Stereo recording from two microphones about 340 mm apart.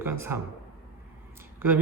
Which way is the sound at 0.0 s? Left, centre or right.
Centre.